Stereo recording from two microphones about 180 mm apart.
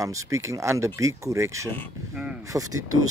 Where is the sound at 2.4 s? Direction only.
20° right (ahead or behind).